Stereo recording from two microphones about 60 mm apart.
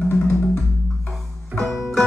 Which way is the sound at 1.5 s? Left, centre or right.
Centre.